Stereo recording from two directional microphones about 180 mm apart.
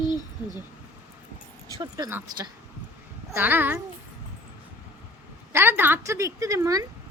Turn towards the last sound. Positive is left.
turn(degrees=-15)  # may be behind; listen again after turning